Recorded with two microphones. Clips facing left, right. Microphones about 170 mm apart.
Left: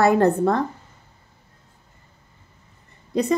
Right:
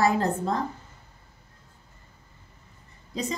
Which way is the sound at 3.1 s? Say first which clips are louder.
Left 9 dB; 65° left (ahead or behind).